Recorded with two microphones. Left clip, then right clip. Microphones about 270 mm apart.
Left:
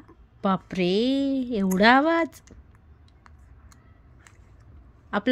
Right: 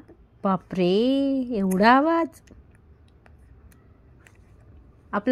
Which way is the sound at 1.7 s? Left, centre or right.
Centre.